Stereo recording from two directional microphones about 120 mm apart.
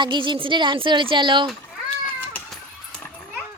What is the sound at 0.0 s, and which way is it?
Speech, 40° right (ahead or behind).